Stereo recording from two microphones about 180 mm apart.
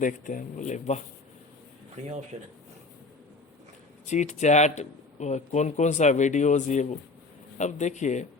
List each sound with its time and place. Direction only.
0.0 s speech: 45° left (ahead or behind)
2.0 s speech: 40° right (ahead or behind)
4.0 s speech: 40° left (ahead or behind)